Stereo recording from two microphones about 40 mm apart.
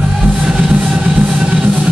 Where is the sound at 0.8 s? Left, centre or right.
Right.